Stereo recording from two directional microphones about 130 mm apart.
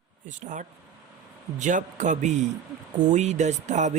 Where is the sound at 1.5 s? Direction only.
70° right (ahead or behind).